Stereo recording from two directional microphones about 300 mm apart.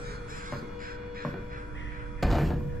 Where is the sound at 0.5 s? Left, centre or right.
Right.